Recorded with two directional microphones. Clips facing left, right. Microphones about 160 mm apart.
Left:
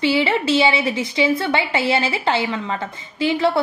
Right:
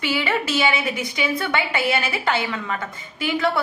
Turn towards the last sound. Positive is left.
turn(degrees=25)  # may be behind; listen again after turning